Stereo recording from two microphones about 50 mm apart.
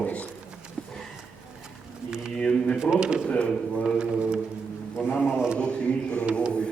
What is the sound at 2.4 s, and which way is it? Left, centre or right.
Speech, left.